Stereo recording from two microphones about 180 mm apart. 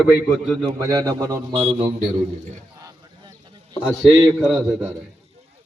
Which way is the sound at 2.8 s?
20° right (ahead or behind).